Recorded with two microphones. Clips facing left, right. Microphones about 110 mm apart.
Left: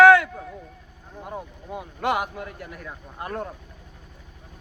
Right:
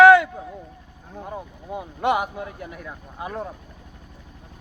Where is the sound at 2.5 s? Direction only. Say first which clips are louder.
Right 2 dB; centre (ahead or behind).